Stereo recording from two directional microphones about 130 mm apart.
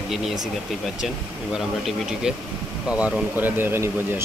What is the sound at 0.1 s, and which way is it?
Speech, centre (ahead or behind).